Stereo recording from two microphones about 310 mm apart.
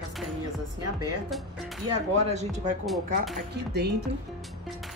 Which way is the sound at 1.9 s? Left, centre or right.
Right.